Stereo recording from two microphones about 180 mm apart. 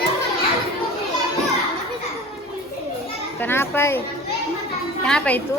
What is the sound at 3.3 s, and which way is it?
Speech, 10° left (ahead or behind).